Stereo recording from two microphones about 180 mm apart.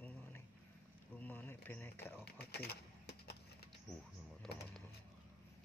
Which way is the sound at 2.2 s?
60° left (ahead or behind).